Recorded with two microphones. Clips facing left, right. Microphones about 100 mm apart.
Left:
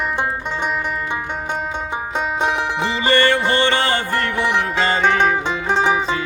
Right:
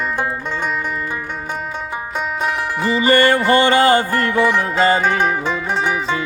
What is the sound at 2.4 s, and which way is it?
Music, 25° left (ahead or behind).